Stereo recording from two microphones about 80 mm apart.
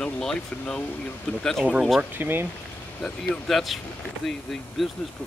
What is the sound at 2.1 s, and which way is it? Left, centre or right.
Speech, right.